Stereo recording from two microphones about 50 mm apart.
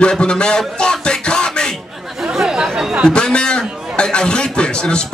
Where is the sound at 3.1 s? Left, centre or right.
Centre.